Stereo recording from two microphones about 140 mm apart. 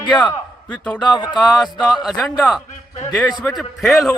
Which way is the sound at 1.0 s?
30° left (ahead or behind).